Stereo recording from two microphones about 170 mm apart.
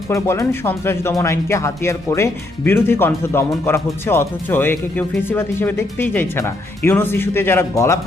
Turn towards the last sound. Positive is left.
turn(degrees=15)  # may be behind; listen again after turning